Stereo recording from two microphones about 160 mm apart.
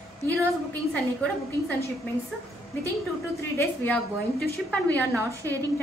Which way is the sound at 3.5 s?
10° left (ahead or behind).